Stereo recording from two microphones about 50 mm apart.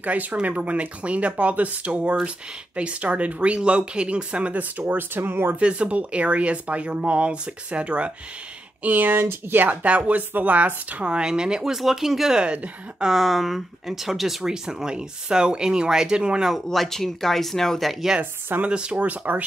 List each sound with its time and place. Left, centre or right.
0.0 s speech: right
5.6 s speech: right
8.8 s speech: right
9.2 s speech: right
9.6 s speech: right
16.7 s speech: centre
18.7 s speech: right
19.0 s speech: right